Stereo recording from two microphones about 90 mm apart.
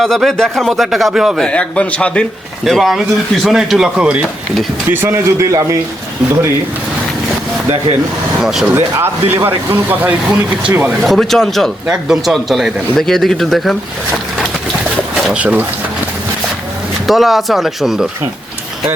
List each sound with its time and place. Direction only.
0.0 s speech: 5° left (ahead or behind)
1.4 s a man's voice: 10° left (ahead or behind)
2.6 s speech: centre (ahead or behind)
4.9 s a man's voice: 25° right (ahead or behind)
8.4 s speech: 5° right (ahead or behind)
8.7 s speech: 25° right (ahead or behind)
11.0 s speech: centre (ahead or behind)
11.9 s speech: 5° right (ahead or behind)
15.1 s a sound: 5° right (ahead or behind)
17.1 s speech: centre (ahead or behind)